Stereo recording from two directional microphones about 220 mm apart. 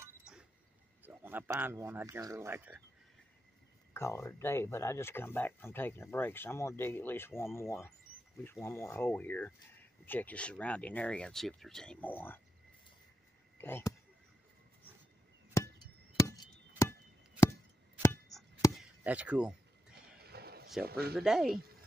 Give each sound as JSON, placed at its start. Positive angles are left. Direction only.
{"t": 0.0, "sound": "a sound", "side_deg": -5}
{"t": 1.0, "sound": "speech", "side_deg": -10}
{"t": 3.9, "sound": "speech", "side_deg": 10}
{"t": 13.6, "sound": "speech", "side_deg": 10}
{"t": 15.6, "sound": "chop", "side_deg": 15}
{"t": 18.3, "sound": "chop", "side_deg": 0}
{"t": 19.9, "sound": "a sound", "side_deg": -45}
{"t": 20.8, "sound": "speech", "side_deg": -45}
{"t": 21.2, "sound": "speech", "side_deg": 0}